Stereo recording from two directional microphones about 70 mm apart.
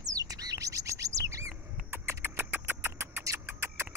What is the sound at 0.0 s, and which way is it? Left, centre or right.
Bird, right.